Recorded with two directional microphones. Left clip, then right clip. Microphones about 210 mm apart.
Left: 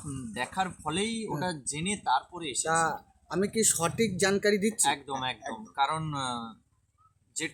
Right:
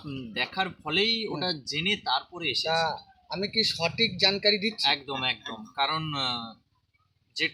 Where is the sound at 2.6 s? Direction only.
45° left (ahead or behind).